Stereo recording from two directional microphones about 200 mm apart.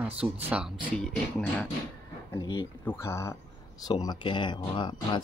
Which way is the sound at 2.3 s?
20° left (ahead or behind).